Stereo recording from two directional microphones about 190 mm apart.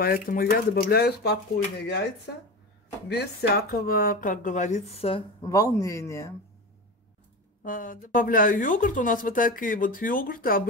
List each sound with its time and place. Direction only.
0.0 s speech: 50° left (ahead or behind)
3.1 s speech: 60° left (ahead or behind); by 5.2 s 30° left (ahead or behind)
5.4 s a man's voice: 15° left (ahead or behind)
7.6 s speech: 45° left (ahead or behind)